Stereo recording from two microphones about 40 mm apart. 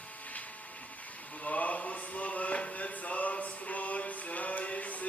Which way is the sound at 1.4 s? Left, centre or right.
Left.